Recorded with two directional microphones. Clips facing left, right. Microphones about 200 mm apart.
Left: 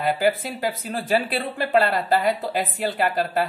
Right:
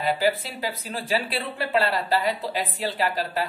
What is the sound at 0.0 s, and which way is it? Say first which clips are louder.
Speech: left 2 dB; 50° left (ahead or behind).